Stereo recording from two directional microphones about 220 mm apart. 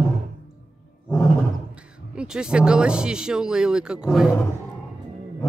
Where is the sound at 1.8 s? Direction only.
5° right (ahead or behind).